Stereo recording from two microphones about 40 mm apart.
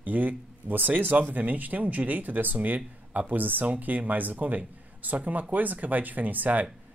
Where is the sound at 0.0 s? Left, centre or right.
Right.